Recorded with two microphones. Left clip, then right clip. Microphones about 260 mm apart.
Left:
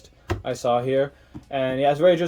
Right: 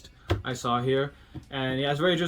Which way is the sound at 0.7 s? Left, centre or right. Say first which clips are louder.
Left 5 dB; centre.